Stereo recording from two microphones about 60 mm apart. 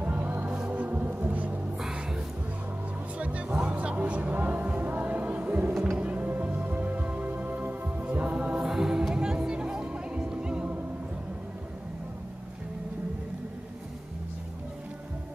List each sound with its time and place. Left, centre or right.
0.0 s music: right
1.8 s music: centre
3.2 s music: right